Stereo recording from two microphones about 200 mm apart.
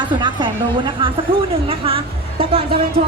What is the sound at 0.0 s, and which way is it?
A woman's voice, 25° right (ahead or behind).